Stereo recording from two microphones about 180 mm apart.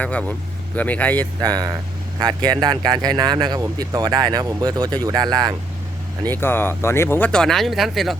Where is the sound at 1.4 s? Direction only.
20° right (ahead or behind).